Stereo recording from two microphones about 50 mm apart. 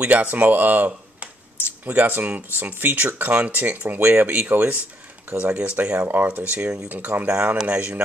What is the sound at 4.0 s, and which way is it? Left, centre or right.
Speech, right.